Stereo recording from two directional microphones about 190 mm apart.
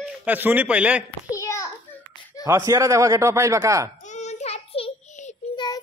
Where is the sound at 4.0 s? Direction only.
40° left (ahead or behind).